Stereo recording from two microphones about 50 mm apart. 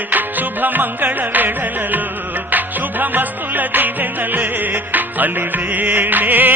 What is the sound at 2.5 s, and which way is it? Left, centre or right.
Music, right.